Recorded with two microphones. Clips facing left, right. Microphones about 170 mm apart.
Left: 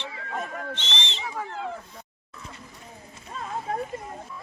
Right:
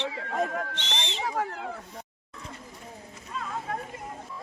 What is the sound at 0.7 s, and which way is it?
Owl, 15° right (ahead or behind).